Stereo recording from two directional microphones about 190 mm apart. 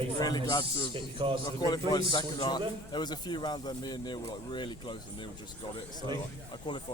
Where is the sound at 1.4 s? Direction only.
20° left (ahead or behind).